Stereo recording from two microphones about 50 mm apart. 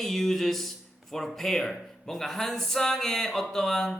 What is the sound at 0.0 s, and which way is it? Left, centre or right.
A man's voice, centre.